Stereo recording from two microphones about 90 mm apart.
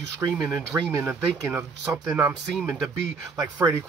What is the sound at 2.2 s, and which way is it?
Speech, 20° right (ahead or behind).